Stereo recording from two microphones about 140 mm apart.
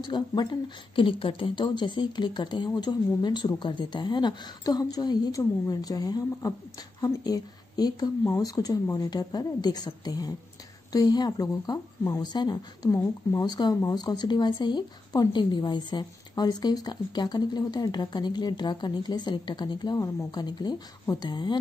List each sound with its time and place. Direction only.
0.0 s speech: 30° left (ahead or behind)
12.9 s speech: 15° left (ahead or behind)
13.4 s speech: 30° left (ahead or behind)